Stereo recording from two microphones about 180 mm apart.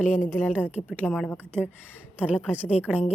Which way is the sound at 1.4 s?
10° right (ahead or behind).